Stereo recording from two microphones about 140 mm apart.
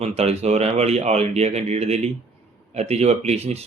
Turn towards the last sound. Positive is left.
turn(degrees=-50)  # may be behind; listen again after turning